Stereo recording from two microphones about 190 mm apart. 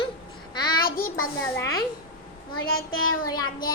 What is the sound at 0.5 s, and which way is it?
Child singing, 25° left (ahead or behind).